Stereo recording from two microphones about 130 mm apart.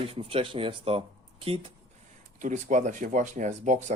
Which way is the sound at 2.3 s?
75° right (ahead or behind).